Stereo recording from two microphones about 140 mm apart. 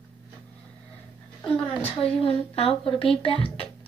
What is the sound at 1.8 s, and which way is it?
A woman's voice, 40° left (ahead or behind).